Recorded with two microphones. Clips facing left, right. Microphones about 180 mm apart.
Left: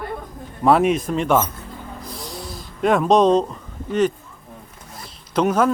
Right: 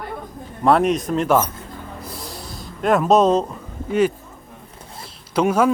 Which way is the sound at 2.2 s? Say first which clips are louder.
Left 1 dB; centre (ahead or behind).